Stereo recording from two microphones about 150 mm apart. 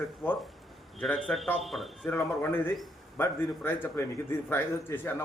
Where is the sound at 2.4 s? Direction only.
15° left (ahead or behind).